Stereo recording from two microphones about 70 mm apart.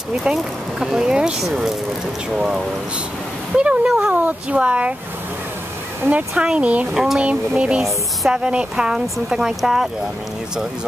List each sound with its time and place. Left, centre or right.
0.1 s speech: centre
6.0 s speech: right
6.9 s speech: centre
7.2 s speech: centre